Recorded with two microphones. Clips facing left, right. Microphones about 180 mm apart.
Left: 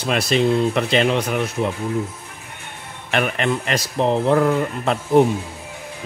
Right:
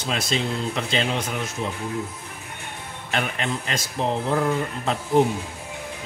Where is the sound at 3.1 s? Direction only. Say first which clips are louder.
Left 6 dB; 65° left (ahead or behind).